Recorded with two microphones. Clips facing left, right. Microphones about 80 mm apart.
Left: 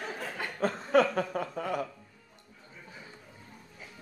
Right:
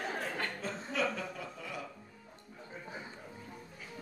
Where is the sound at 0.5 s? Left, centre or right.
Left.